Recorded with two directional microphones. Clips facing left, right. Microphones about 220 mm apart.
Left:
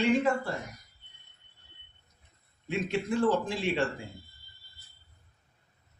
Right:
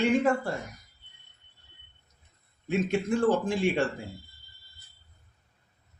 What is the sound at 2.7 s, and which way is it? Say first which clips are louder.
A man's voice: right 4 dB; 45° right (ahead or behind).